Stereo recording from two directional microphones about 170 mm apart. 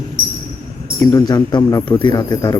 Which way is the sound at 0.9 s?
20° left (ahead or behind).